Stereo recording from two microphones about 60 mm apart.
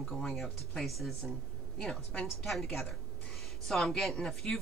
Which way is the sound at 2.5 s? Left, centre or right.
Centre.